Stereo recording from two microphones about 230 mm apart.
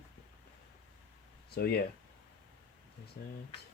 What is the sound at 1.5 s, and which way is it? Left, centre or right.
Speech, left.